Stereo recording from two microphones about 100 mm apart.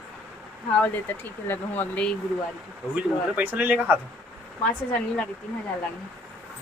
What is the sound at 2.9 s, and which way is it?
Speech, 15° right (ahead or behind).